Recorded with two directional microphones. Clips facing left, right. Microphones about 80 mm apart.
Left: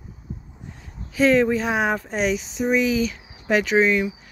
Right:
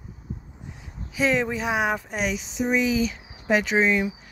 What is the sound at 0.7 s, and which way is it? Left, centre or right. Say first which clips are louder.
Speech: left 5 dB; centre.